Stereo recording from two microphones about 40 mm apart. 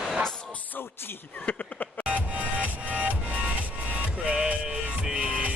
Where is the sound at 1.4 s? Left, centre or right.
Left.